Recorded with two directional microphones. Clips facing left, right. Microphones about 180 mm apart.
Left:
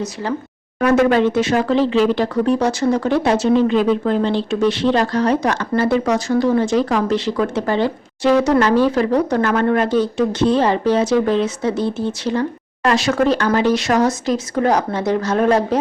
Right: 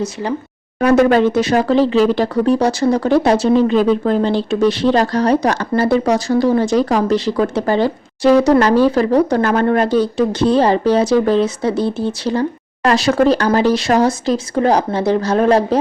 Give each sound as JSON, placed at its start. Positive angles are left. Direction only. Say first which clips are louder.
{"t": 0.0, "sound": "speech", "louder": "right 2 dB", "side_deg": -15}
{"t": 0.8, "sound": "speech", "louder": "right 2 dB", "side_deg": -35}